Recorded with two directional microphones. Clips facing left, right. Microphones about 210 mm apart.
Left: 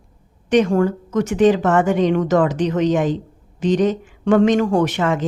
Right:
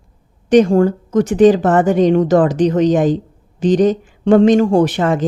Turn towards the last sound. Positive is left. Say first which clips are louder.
# right 4 dB
turn(degrees=-35)  # may be behind; listen again after turning